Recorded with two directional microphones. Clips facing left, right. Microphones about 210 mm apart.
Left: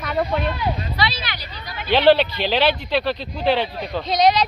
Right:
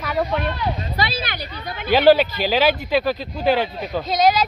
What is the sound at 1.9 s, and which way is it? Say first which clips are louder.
Speech: right 1 dB; 5° right (ahead or behind).